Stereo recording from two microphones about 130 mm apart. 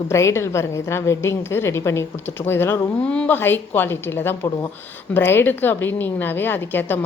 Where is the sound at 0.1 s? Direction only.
20° left (ahead or behind).